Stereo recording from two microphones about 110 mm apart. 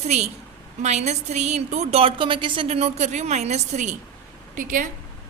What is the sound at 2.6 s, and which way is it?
A woman's voice, 80° right.